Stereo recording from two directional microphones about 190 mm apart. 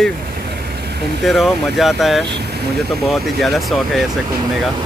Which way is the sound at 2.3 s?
60° right (ahead or behind).